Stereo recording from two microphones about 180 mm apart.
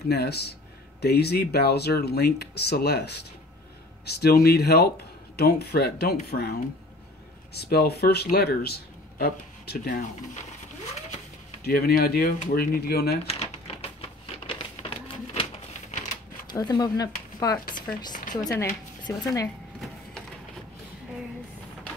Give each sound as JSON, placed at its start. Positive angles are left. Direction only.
{"t": 0.1, "sound": "speech", "side_deg": 65}
{"t": 7.5, "sound": "speech", "side_deg": 60}
{"t": 11.6, "sound": "speech", "side_deg": 55}
{"t": 13.3, "sound": "typewriter", "side_deg": 35}
{"t": 14.4, "sound": "a sound", "side_deg": 25}
{"t": 16.4, "sound": "speech", "side_deg": 25}
{"t": 17.8, "sound": "chopping", "side_deg": 50}
{"t": 18.6, "sound": "speech", "side_deg": 15}